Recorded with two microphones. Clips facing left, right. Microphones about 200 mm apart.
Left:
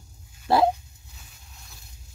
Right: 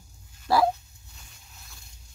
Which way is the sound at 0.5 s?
25° left (ahead or behind).